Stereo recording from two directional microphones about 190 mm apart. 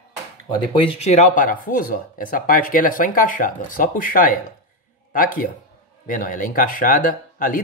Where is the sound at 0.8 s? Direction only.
35° left (ahead or behind).